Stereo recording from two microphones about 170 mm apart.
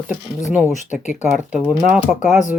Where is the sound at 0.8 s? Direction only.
45° left (ahead or behind).